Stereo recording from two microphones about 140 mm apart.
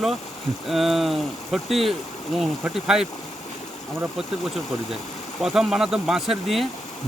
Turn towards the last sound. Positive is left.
turn(degrees=0)  # may be behind; listen again after turning